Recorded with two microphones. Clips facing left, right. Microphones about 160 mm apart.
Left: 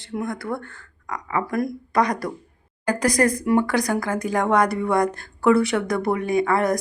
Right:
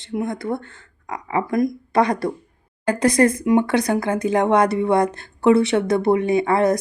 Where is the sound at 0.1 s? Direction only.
20° right (ahead or behind).